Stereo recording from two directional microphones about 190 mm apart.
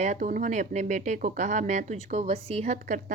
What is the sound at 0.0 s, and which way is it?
Speech, 40° right (ahead or behind).